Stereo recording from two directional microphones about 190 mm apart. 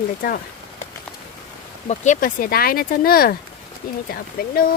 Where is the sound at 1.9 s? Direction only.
45° left (ahead or behind).